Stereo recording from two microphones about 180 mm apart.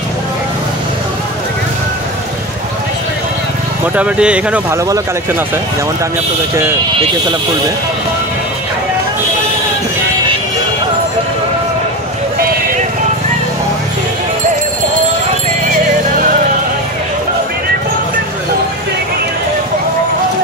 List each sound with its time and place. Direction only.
3.9 s speech: 5° right (ahead or behind)
4.8 s speech: 20° right (ahead or behind)